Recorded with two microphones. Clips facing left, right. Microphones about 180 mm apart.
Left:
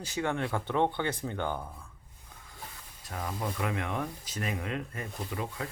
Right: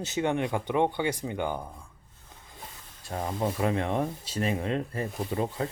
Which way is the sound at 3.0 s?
30° right (ahead or behind).